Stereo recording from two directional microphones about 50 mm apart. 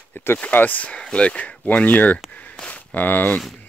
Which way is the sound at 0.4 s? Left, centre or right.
Left.